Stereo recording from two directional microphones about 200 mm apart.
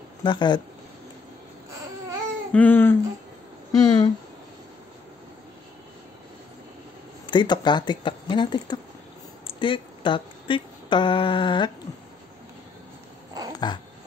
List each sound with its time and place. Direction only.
0.2 s speech: 25° left (ahead or behind)
2.5 s speech: 10° left (ahead or behind)
7.2 s speech: 20° left (ahead or behind)
13.5 s dog: 20° left (ahead or behind)